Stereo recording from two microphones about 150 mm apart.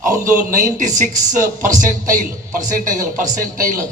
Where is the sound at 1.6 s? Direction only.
60° right (ahead or behind).